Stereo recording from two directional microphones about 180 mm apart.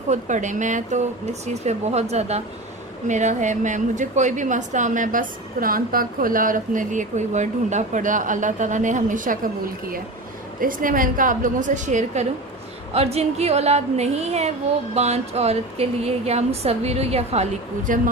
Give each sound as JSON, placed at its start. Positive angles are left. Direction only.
{"t": 0.1, "sound": "a woman's voice", "side_deg": -45}
{"t": 10.6, "sound": "a woman's voice", "side_deg": -50}